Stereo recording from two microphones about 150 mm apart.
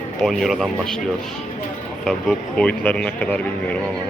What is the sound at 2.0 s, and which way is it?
Speech, 5° left (ahead or behind).